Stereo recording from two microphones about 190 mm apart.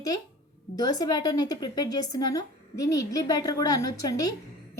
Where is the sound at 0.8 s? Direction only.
20° left (ahead or behind).